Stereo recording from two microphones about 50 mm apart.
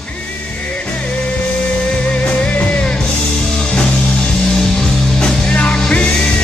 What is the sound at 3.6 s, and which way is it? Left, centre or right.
Music, centre.